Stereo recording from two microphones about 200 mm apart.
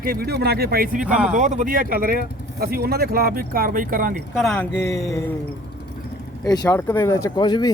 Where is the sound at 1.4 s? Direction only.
40° right (ahead or behind).